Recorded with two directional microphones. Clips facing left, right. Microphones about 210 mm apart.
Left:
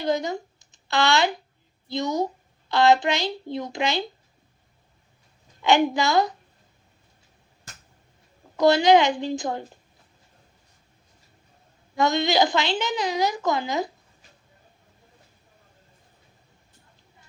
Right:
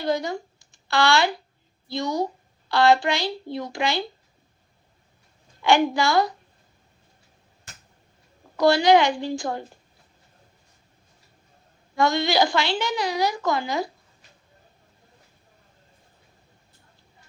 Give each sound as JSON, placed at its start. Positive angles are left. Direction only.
{"t": 0.0, "sound": "speech", "side_deg": 20}
{"t": 5.6, "sound": "speech", "side_deg": 20}
{"t": 8.5, "sound": "speech", "side_deg": 20}
{"t": 11.9, "sound": "speech", "side_deg": 20}